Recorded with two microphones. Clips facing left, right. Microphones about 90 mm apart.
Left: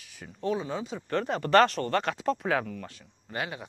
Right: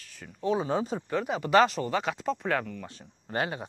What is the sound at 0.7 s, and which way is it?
Speech, 40° right (ahead or behind).